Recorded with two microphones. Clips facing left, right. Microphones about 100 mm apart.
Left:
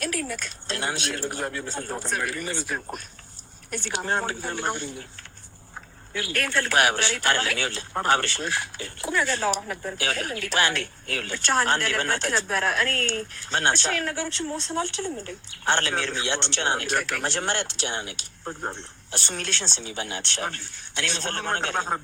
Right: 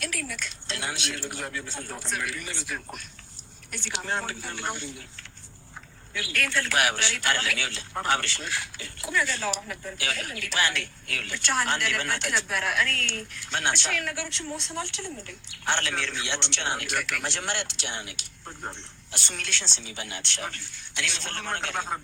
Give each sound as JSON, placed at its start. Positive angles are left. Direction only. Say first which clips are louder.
{"t": 0.0, "sound": "speech", "louder": "left 5 dB", "side_deg": 45}
{"t": 6.1, "sound": "speech", "louder": "left 3 dB", "side_deg": 50}
{"t": 9.6, "sound": "speech", "louder": "left 5 dB", "side_deg": 45}